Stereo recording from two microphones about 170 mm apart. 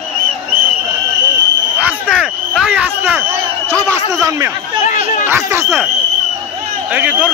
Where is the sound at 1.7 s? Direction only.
10° right (ahead or behind).